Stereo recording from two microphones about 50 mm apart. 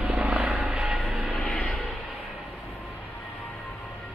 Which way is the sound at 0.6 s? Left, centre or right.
Centre.